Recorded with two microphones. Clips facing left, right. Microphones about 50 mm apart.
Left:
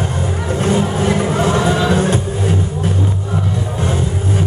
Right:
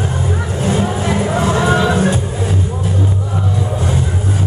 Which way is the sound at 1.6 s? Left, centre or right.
Right.